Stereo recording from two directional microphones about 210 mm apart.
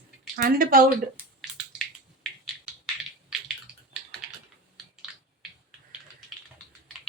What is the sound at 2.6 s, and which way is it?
Typing, 5° right (ahead or behind).